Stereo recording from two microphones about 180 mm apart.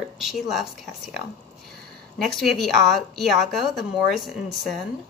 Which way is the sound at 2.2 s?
Centre (ahead or behind).